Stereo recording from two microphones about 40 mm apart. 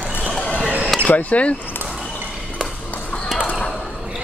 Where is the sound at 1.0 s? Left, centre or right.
Left.